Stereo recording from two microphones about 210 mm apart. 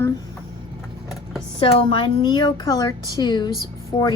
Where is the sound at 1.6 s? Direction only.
25° left (ahead or behind).